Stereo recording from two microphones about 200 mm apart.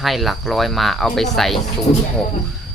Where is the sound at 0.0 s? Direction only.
Centre (ahead or behind).